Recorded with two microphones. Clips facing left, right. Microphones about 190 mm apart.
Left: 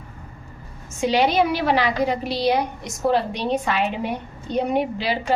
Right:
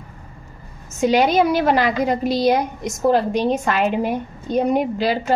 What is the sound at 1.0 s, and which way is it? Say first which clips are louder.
A woman's voice: right 3 dB; 45° right (ahead or behind).